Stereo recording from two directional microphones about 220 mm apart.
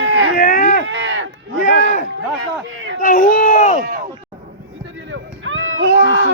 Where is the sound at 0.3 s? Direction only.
35° left (ahead or behind).